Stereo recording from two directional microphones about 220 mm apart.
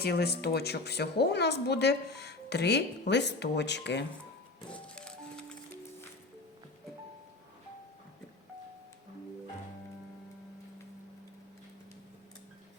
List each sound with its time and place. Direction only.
0.0 s a woman's voice: 45° left (ahead or behind)
4.7 s music: 5° left (ahead or behind)